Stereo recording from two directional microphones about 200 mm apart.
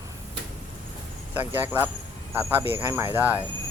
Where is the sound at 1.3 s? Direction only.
10° right (ahead or behind).